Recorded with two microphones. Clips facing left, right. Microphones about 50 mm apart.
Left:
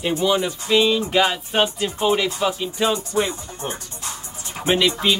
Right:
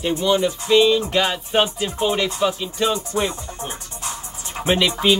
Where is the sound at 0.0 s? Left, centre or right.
Centre.